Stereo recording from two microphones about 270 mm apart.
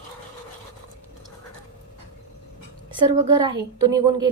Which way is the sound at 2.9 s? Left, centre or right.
Centre.